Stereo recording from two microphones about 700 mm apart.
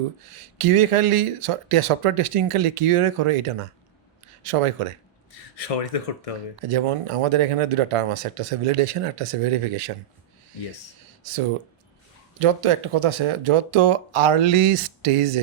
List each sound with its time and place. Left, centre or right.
0.6 s speech: right
5.3 s speech: left
6.7 s speech: right
12.4 s speech: right